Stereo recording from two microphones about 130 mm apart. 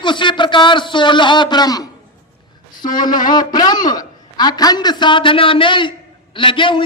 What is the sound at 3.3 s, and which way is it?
A man's voice, 30° left (ahead or behind).